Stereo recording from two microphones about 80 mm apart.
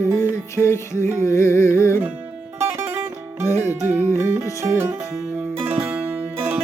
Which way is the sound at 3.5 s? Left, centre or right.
Left.